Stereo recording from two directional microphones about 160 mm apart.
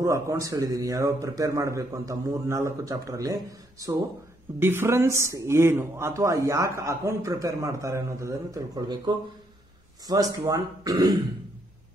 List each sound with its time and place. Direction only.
0.0 s speech: 20° right (ahead or behind)
4.6 s speech: 15° right (ahead or behind)